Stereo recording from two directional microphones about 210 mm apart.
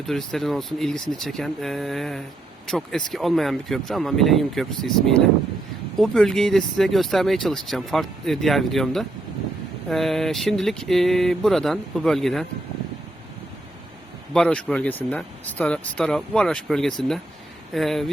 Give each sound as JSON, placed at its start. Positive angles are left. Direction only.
{"t": 0.0, "sound": "speech", "side_deg": 0}
{"t": 14.3, "sound": "speech", "side_deg": 5}